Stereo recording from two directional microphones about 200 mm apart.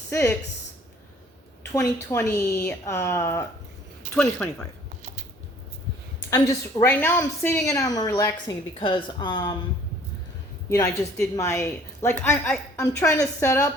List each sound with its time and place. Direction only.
0.1 s a woman's voice: 15° left (ahead or behind)
1.7 s a woman's voice: 15° left (ahead or behind)
4.1 s speech: 5° left (ahead or behind)
6.3 s a woman's voice: 15° left (ahead or behind)
10.7 s a woman's voice: 15° left (ahead or behind)